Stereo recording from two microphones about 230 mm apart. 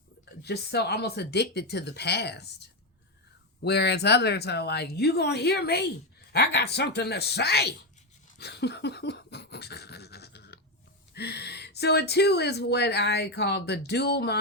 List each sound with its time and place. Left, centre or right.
0.4 s speech: left
8.4 s a sound: left
11.1 s speech: left